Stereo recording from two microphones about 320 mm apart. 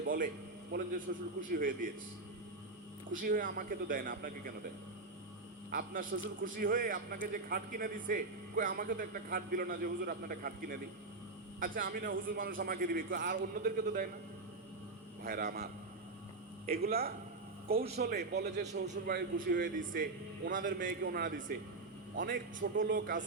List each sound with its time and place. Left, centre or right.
0.0 s a man's voice: right
3.1 s a man's voice: right
5.7 s a man's voice: right
15.2 s a man's voice: right